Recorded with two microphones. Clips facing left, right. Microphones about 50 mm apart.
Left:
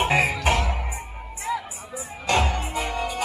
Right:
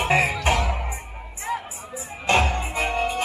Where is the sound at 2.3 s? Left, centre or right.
Right.